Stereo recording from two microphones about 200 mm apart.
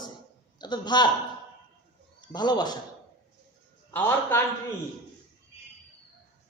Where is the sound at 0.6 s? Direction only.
20° left (ahead or behind).